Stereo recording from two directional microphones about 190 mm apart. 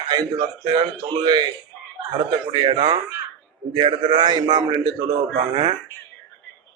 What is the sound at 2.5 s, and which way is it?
Speech, 25° right (ahead or behind).